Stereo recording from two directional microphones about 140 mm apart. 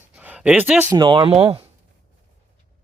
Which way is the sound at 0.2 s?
10° right (ahead or behind).